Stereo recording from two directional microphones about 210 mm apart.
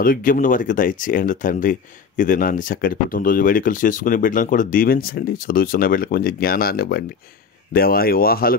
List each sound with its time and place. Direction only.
0.0 s speech: 40° left (ahead or behind)